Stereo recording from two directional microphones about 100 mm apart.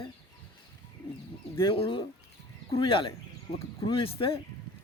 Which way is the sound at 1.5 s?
60° left (ahead or behind).